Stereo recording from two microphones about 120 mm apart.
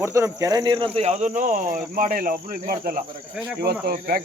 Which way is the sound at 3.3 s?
5° right (ahead or behind).